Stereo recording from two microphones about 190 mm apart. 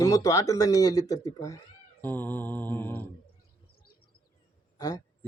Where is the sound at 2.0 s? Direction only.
10° left (ahead or behind).